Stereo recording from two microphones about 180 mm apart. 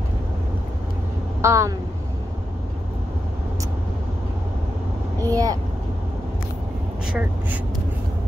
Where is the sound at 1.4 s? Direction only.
15° right (ahead or behind).